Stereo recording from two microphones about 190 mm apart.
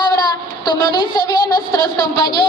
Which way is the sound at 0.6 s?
25° left (ahead or behind).